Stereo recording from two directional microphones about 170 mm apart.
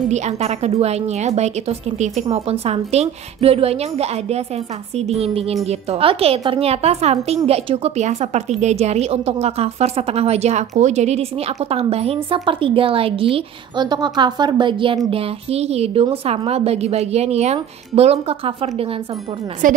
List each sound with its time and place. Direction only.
0.1 s a woman's voice: 40° right (ahead or behind)
19.6 s a woman's voice: 50° right (ahead or behind)